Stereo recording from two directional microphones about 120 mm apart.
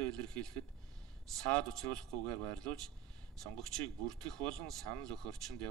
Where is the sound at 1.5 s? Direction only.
5° left (ahead or behind).